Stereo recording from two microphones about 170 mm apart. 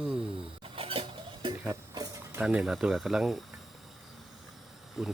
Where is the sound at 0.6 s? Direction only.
30° right (ahead or behind).